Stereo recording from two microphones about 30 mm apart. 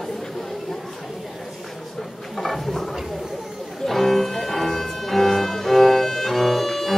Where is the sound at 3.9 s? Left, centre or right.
Centre.